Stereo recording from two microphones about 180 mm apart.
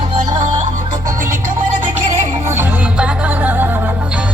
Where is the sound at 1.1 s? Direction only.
15° right (ahead or behind).